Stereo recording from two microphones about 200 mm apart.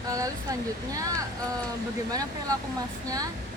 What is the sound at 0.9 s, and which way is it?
Speech, 15° right (ahead or behind).